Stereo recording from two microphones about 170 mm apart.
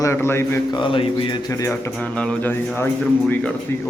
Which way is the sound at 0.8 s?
30° left (ahead or behind).